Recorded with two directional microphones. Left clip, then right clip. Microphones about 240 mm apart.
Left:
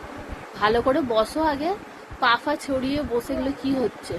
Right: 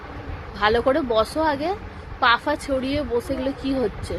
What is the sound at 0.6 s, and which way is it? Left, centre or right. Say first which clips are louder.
Speech: right 1 dB; centre.